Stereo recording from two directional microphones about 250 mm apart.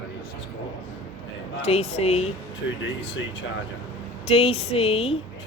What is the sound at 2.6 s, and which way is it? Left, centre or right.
Speech, left.